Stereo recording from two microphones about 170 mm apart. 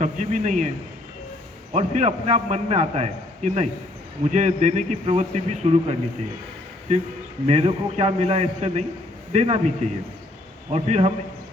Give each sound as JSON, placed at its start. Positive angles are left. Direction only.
{"t": 0.0, "sound": "speech", "side_deg": -45}
{"t": 1.7, "sound": "a man's voice", "side_deg": -40}
{"t": 7.4, "sound": "a man's voice", "side_deg": -40}